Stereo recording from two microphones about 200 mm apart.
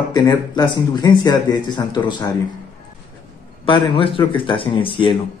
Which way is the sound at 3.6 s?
25° left (ahead or behind).